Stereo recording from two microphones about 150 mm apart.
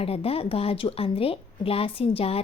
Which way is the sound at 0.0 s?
40° left (ahead or behind).